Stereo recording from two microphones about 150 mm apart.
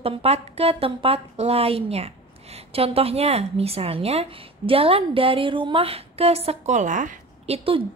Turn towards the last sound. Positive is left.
turn(degrees=-40)  # may be behind; listen again after turning